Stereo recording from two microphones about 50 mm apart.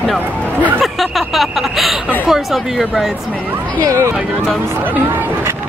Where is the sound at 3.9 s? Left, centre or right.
Right.